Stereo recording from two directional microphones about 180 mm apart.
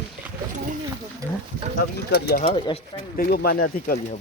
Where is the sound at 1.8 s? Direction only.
60° left (ahead or behind).